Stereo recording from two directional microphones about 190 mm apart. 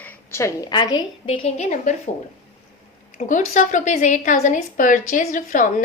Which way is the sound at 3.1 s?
40° left (ahead or behind).